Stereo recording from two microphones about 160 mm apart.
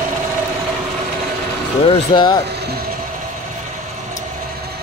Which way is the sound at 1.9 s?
30° left (ahead or behind).